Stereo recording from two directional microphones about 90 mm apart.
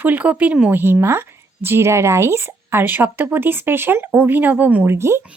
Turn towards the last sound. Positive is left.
turn(degrees=-30)  # may be behind; listen again after turning